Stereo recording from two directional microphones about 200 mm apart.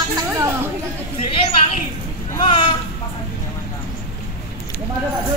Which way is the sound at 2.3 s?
25° left (ahead or behind).